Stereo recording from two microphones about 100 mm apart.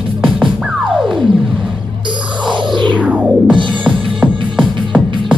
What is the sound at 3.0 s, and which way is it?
Music, 10° right (ahead or behind).